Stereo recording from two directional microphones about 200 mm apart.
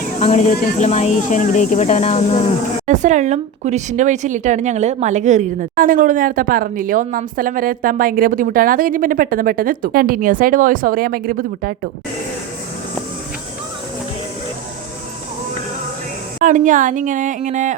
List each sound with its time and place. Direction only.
0.2 s speech: 35° left (ahead or behind)
2.8 s speech: 35° right (ahead or behind)
16.4 s speech: 40° right (ahead or behind)